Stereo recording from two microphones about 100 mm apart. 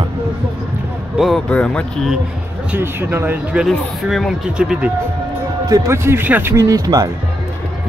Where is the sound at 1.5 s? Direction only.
10° left (ahead or behind).